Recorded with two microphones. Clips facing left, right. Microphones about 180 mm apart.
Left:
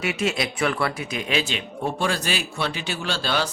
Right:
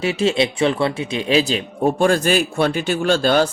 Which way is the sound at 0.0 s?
30° right (ahead or behind).